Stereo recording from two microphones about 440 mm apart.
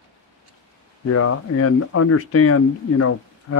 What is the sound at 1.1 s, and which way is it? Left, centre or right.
Speech, left.